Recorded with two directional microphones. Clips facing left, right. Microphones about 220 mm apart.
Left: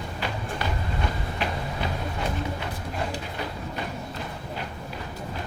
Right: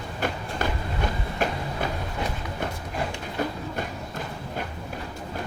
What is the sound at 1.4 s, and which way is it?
Train, 45° right (ahead or behind).